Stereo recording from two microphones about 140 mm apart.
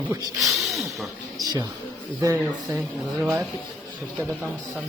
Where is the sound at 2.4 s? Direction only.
5° right (ahead or behind).